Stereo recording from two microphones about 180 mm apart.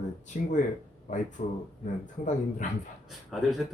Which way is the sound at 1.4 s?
35° left (ahead or behind).